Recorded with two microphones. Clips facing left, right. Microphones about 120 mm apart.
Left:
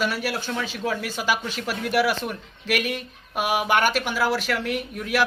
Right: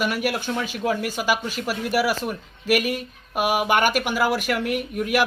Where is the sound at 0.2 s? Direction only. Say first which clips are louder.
Right 3 dB; 15° right (ahead or behind).